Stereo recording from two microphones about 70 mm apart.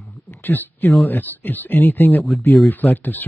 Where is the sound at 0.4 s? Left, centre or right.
Left.